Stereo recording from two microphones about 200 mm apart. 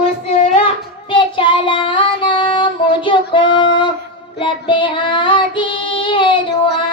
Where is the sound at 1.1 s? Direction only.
25° left (ahead or behind).